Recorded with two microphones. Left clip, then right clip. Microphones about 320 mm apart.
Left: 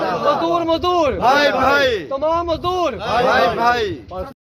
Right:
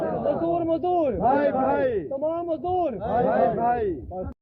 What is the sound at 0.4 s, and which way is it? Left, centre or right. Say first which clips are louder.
Speech: left 6 dB; centre.